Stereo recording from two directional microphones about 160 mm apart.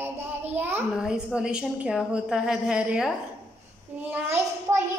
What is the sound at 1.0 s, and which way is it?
A woman's voice, 5° right (ahead or behind).